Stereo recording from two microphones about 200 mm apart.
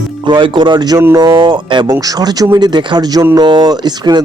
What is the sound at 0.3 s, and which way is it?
Speech, 25° right (ahead or behind).